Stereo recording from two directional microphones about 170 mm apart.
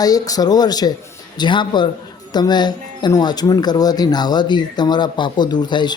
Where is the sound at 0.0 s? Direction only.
20° left (ahead or behind).